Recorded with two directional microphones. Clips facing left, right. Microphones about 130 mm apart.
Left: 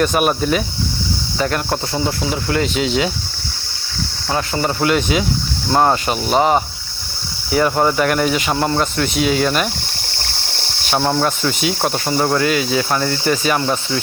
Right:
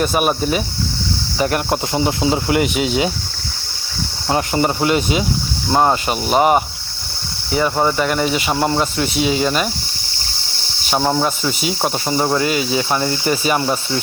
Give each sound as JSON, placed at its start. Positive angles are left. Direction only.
{"t": 0.0, "sound": "speech", "side_deg": -5}
{"t": 1.4, "sound": "speech", "side_deg": -15}
{"t": 2.7, "sound": "speech", "side_deg": -10}
{"t": 4.3, "sound": "speech", "side_deg": -20}
{"t": 4.8, "sound": "speech", "side_deg": -5}
{"t": 10.9, "sound": "speech", "side_deg": -5}
{"t": 13.0, "sound": "speech", "side_deg": -20}